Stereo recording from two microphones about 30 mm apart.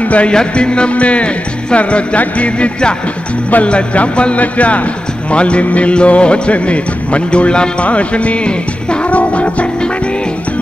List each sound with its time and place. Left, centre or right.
0.0 s music: left
0.3 s music: left
2.1 s speech: left
5.3 s music: left
7.8 s speech: left
9.1 s music: left